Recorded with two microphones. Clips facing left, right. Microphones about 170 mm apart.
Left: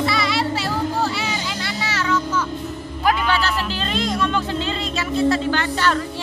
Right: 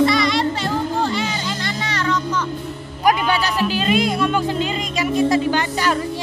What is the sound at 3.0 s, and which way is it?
Speech, 15° right (ahead or behind).